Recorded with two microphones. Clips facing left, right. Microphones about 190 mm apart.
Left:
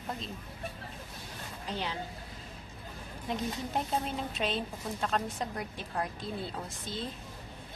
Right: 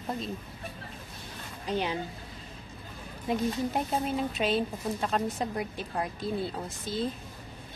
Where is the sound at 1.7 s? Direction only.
15° right (ahead or behind).